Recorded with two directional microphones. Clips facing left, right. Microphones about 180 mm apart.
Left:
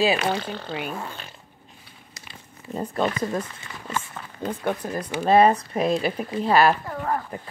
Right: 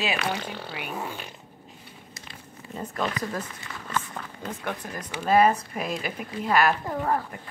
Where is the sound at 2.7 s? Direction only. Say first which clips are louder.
Left 5 dB; 30° left (ahead or behind).